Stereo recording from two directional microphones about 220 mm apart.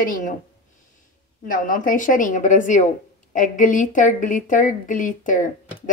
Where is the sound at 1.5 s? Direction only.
40° left (ahead or behind).